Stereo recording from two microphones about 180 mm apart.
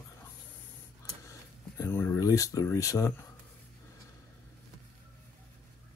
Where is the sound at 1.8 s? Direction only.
15° left (ahead or behind).